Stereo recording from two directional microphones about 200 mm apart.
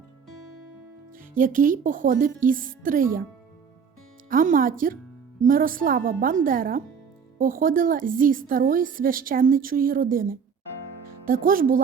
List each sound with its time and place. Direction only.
1.3 s a woman's voice: 40° right (ahead or behind)
4.3 s a woman's voice: 40° right (ahead or behind)